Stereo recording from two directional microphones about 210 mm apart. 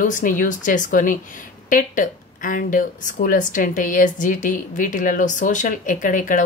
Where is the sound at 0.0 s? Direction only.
40° left (ahead or behind).